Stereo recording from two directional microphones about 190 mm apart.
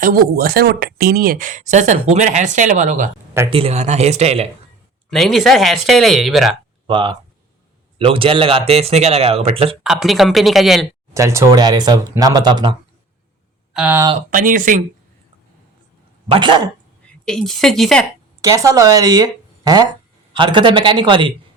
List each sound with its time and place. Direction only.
0.0 s speech: 50° right (ahead or behind); by 4.4 s 35° right (ahead or behind)
5.1 s speech: centre (ahead or behind)
6.8 s speech: 25° right (ahead or behind)
9.8 s speech: centre (ahead or behind)
11.1 s speech: 15° right (ahead or behind)
13.7 s speech: 5° right (ahead or behind)
14.3 s speech: 45° right (ahead or behind)
16.3 s speech: 25° right (ahead or behind)
17.1 s a woman's voice: 5° left (ahead or behind)
18.4 s speech: 15° right (ahead or behind)